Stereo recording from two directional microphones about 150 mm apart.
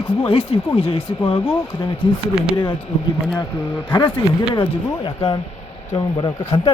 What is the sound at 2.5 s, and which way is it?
Speech, 35° left (ahead or behind).